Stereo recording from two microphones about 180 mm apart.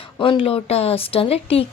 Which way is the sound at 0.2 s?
30° left (ahead or behind).